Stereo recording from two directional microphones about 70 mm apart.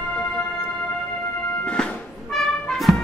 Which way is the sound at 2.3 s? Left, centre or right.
Centre.